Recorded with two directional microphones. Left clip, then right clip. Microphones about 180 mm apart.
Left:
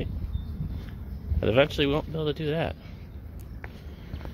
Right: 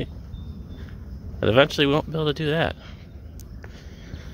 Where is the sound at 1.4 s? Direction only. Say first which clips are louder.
Right 5 dB; 25° right (ahead or behind).